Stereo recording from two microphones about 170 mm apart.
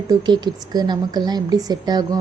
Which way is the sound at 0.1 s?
25° right (ahead or behind).